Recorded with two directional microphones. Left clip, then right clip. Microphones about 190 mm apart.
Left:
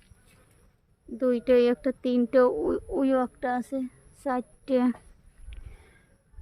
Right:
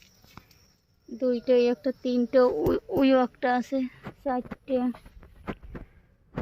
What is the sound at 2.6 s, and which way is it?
Speech, 10° right (ahead or behind).